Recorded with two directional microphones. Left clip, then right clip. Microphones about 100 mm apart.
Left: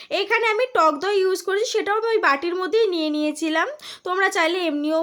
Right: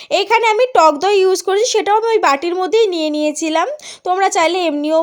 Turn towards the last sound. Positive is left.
turn(degrees=-45)  # may be behind; listen again after turning